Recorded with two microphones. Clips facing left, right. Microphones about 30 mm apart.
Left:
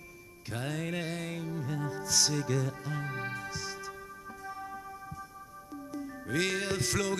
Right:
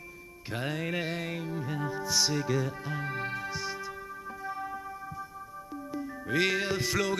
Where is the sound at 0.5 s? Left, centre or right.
Centre.